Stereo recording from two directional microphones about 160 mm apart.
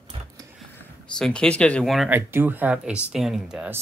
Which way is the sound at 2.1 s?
10° right (ahead or behind).